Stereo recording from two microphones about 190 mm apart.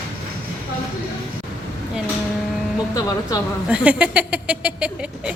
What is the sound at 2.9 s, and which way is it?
Speech, 20° left (ahead or behind).